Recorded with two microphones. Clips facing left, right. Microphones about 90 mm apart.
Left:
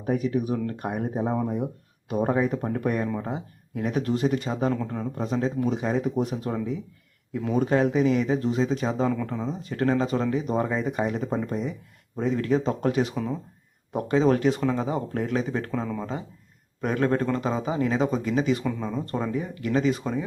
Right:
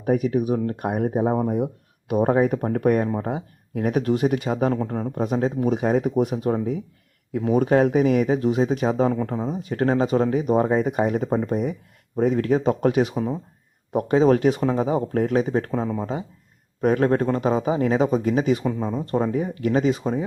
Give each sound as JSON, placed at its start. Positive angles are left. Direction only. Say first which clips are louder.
{"t": 0.0, "sound": "speech", "louder": "right 4 dB", "side_deg": -50}
{"t": 0.5, "sound": "speech", "louder": "right 4 dB", "side_deg": -35}
{"t": 0.8, "sound": "speech", "louder": "right 6 dB", "side_deg": -55}
{"t": 1.2, "sound": "speech", "louder": "right 3 dB", "side_deg": -40}
{"t": 4.4, "sound": "speech", "louder": "right 4 dB", "side_deg": -45}
{"t": 9.0, "sound": "speech", "louder": "right 3 dB", "side_deg": -35}
{"t": 13.2, "sound": "speech", "louder": "right 4 dB", "side_deg": -30}
{"t": 13.9, "sound": "speech", "louder": "right 4 dB", "side_deg": -45}
{"t": 14.6, "sound": "speech", "louder": "right 4 dB", "side_deg": -30}
{"t": 16.8, "sound": "speech", "louder": "right 5 dB", "side_deg": -40}
{"t": 18.6, "sound": "speech", "louder": "right 4 dB", "side_deg": -30}